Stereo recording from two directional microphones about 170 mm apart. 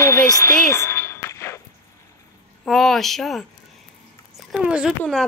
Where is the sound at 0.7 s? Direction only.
15° left (ahead or behind).